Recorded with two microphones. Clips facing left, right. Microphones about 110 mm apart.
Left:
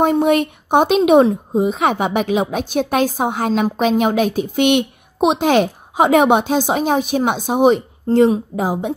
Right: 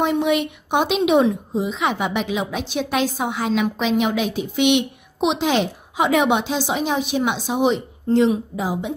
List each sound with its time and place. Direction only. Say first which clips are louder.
0.0 s a woman's voice: left 5 dB; 45° left (ahead or behind)